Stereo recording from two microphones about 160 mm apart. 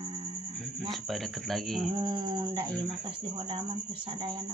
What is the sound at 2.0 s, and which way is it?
Speech, 30° right (ahead or behind).